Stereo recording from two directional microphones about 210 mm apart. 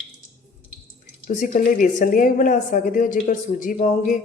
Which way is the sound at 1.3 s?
35° left (ahead or behind).